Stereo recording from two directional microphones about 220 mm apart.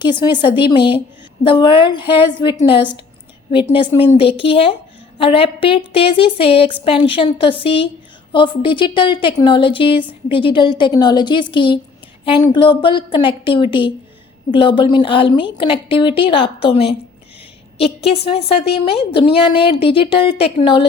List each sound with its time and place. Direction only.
0.0 s a woman's voice: 20° left (ahead or behind)